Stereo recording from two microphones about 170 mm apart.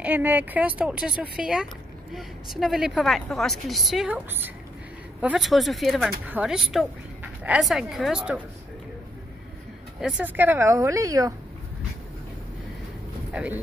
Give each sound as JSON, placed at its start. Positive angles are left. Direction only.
{"t": 0.0, "sound": "a woman's voice", "side_deg": -10}
{"t": 9.9, "sound": "speech", "side_deg": -5}
{"t": 13.3, "sound": "speech", "side_deg": -10}